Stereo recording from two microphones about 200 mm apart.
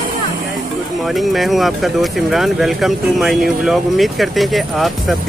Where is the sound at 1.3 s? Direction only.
Centre (ahead or behind).